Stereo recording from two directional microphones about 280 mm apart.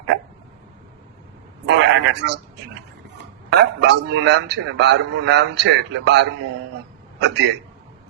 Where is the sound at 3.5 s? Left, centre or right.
Right.